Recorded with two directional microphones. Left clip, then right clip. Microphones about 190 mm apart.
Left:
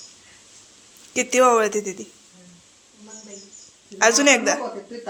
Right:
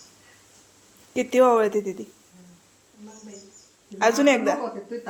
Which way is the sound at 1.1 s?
15° right (ahead or behind).